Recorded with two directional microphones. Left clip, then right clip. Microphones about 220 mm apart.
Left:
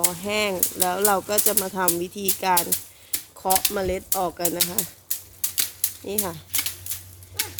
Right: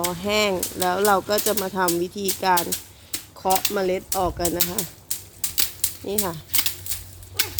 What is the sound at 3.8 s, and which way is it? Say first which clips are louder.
Speech: right 2 dB; centre (ahead or behind).